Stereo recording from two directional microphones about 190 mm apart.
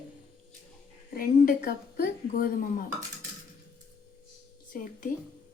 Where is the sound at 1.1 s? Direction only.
50° left (ahead or behind).